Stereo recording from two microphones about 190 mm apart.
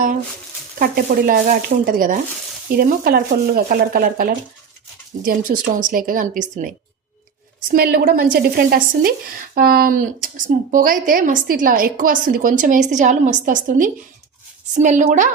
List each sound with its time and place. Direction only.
0.8 s a woman's voice: 50° right (ahead or behind)